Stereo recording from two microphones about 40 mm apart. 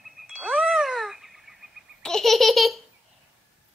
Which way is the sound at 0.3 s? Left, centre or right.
Centre.